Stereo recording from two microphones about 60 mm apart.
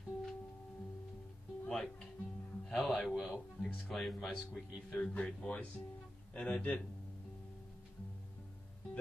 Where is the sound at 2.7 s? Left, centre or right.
Centre.